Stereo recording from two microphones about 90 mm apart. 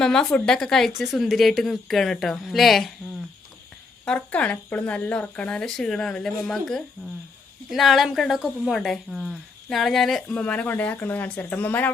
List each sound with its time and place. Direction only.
0.0 s speech: 5° left (ahead or behind)
4.0 s speech: 15° left (ahead or behind)
10.3 s speech: 15° left (ahead or behind)